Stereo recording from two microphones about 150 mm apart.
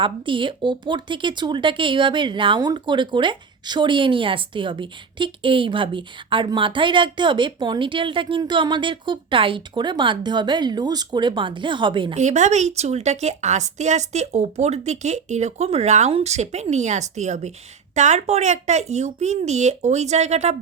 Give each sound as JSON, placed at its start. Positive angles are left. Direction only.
{"t": 0.0, "sound": "speech", "side_deg": -35}
{"t": 12.1, "sound": "a woman's voice", "side_deg": -50}